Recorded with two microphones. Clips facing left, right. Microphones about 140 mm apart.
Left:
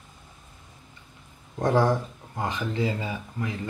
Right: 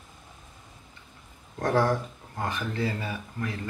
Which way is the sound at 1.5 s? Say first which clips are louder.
Left 2 dB; 20° left (ahead or behind).